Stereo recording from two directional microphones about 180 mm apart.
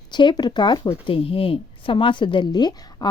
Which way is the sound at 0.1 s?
25° left (ahead or behind).